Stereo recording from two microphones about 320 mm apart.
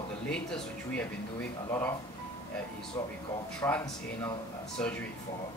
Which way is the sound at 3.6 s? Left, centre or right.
Centre.